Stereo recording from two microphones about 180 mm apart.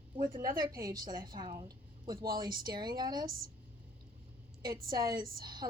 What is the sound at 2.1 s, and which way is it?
Speech, 55° right (ahead or behind).